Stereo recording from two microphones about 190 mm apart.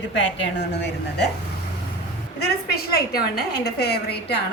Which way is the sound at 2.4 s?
55° left (ahead or behind).